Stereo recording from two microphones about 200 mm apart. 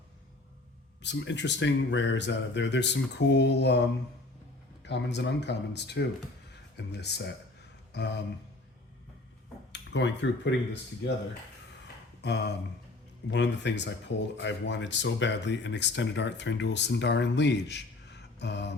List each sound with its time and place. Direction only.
1.0 s speech: 65° left (ahead or behind)
9.7 s speech: 65° left (ahead or behind)
12.2 s speech: 55° left (ahead or behind)